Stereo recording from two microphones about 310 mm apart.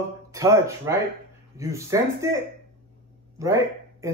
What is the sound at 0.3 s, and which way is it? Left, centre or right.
A man's voice, centre.